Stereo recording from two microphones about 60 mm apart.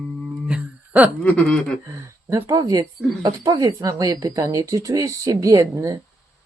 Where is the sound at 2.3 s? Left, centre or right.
Right.